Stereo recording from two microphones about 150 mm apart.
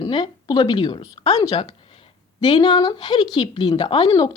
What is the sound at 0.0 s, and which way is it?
A woman's voice, 30° left (ahead or behind).